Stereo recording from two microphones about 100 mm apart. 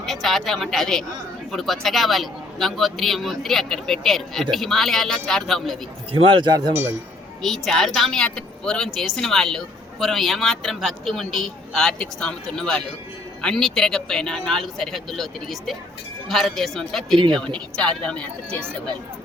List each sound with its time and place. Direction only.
0.0 s a woman's voice: centre (ahead or behind)
6.1 s speech: 65° right (ahead or behind); by 6.7 s 45° right (ahead or behind)
7.4 s a woman's voice: centre (ahead or behind)